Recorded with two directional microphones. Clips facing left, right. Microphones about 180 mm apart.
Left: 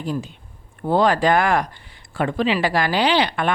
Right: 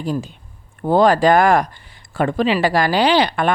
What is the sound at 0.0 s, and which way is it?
Speech, 40° right (ahead or behind).